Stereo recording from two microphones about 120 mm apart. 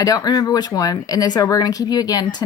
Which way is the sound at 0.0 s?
30° left (ahead or behind).